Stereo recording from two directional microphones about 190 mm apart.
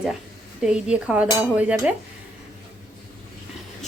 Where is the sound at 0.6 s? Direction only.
5° right (ahead or behind).